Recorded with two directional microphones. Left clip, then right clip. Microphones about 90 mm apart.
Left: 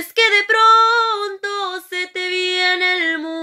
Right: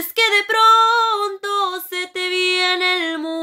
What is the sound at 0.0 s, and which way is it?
Female singing, 45° right (ahead or behind).